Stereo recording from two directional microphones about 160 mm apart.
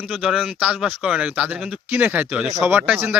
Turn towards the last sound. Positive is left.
turn(degrees=-10)  # may be behind; listen again after turning